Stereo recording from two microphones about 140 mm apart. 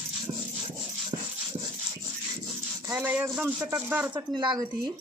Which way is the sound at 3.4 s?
10° right (ahead or behind).